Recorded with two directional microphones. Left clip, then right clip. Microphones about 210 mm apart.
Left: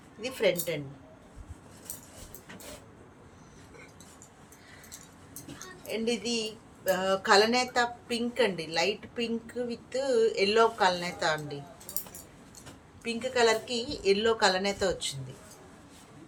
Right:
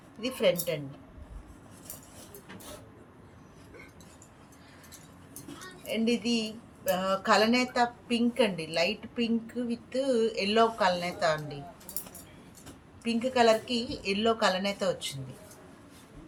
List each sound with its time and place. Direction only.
0.2 s speech: 35° left (ahead or behind)
6.1 s speech: 35° left (ahead or behind)
13.1 s speech: 35° left (ahead or behind)